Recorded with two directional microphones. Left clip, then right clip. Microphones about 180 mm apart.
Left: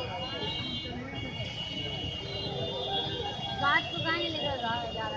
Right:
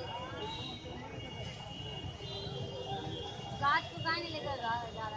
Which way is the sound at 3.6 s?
25° left (ahead or behind).